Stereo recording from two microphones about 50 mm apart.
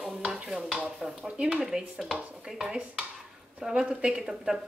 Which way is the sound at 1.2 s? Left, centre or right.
Right.